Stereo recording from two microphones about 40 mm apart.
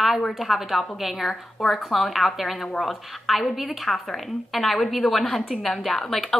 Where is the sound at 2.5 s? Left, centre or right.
Left.